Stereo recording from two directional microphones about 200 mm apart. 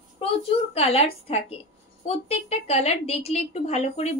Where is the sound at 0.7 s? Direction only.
30° left (ahead or behind).